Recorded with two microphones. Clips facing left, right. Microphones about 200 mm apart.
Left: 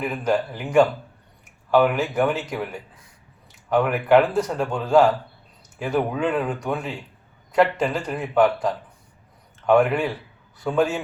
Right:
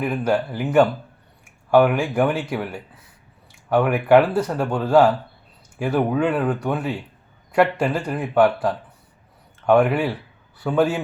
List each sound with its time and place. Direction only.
0.0 s speech: 5° right (ahead or behind)